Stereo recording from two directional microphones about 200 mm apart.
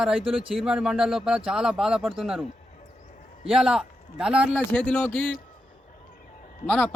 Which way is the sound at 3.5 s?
5° right (ahead or behind).